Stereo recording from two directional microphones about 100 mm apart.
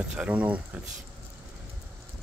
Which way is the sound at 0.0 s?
10° right (ahead or behind).